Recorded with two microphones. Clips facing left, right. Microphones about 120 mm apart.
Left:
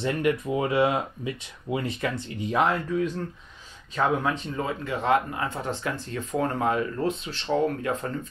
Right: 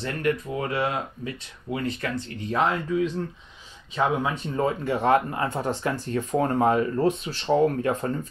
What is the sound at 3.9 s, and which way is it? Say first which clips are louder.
Speech: even; 10° right (ahead or behind).